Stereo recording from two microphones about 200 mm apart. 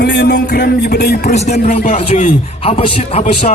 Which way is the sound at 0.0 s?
55° left (ahead or behind).